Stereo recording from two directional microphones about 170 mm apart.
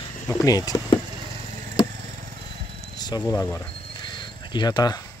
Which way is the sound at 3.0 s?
20° left (ahead or behind).